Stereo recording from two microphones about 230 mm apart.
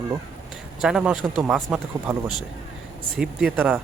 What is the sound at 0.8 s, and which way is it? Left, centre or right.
Speech, centre.